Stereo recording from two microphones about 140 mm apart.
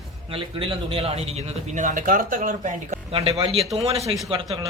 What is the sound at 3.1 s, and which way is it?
A man's voice, 40° right (ahead or behind).